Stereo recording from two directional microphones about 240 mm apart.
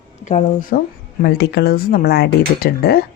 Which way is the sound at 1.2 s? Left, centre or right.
Left.